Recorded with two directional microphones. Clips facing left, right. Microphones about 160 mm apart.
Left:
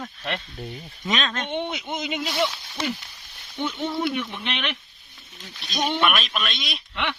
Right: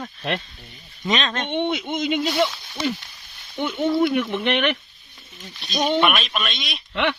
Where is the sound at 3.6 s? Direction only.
55° right (ahead or behind).